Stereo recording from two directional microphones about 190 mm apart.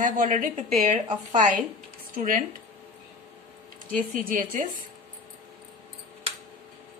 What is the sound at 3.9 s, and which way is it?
Speech, 45° right (ahead or behind).